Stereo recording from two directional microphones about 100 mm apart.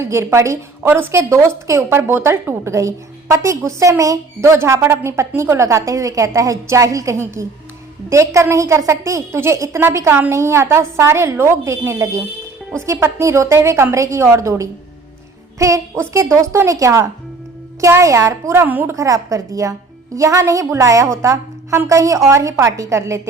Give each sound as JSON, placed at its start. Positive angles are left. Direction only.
{"t": 0.0, "sound": "a woman's voice", "side_deg": -25}
{"t": 18.9, "sound": "a woman's voice", "side_deg": -35}